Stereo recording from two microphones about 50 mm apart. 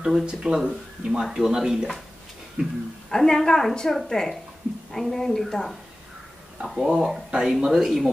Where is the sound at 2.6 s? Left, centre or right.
Right.